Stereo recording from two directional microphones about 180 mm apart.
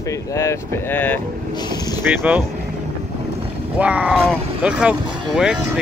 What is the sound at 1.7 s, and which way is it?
Vehicle, 20° left (ahead or behind).